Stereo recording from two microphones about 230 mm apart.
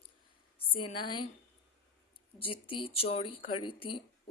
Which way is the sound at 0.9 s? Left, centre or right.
Centre.